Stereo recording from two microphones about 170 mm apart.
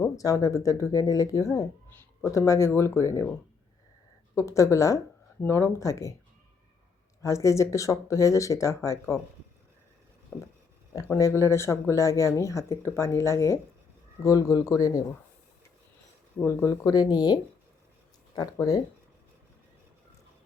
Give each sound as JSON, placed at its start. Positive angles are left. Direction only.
{"t": 0.0, "sound": "speech", "side_deg": 15}
{"t": 4.4, "sound": "speech", "side_deg": 20}
{"t": 7.2, "sound": "speech", "side_deg": 20}
{"t": 10.3, "sound": "a sound", "side_deg": 5}
{"t": 10.9, "sound": "speech", "side_deg": 20}
{"t": 16.5, "sound": "speech", "side_deg": 20}